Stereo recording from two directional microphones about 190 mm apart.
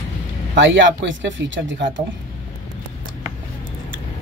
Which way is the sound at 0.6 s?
80° right.